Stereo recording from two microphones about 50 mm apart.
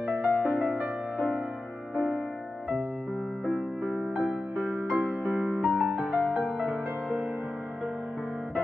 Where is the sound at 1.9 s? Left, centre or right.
Left.